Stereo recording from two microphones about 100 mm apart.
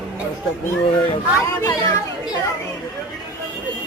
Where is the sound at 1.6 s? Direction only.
35° left (ahead or behind).